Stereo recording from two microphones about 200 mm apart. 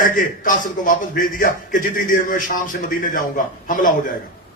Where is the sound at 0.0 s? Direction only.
40° left (ahead or behind).